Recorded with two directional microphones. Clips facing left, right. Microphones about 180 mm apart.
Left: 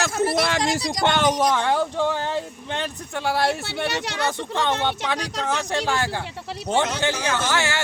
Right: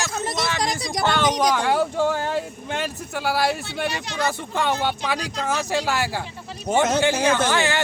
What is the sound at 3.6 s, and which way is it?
Speech, 80° left.